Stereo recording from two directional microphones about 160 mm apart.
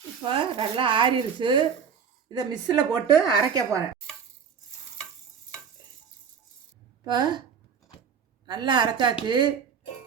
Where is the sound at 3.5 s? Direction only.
20° right (ahead or behind).